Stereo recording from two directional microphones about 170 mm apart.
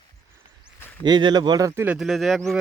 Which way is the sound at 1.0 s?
25° right (ahead or behind).